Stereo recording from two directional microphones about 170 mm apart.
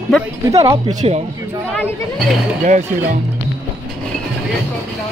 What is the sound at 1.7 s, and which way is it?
Speech, 5° left (ahead or behind).